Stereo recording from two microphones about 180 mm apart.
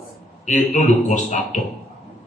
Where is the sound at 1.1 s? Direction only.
45° left (ahead or behind).